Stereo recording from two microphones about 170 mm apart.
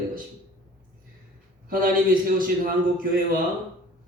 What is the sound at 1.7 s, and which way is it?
A man's voice, 55° right (ahead or behind).